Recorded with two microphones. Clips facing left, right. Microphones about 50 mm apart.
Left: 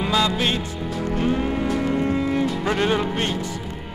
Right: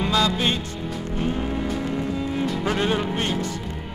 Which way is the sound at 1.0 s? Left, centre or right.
Left.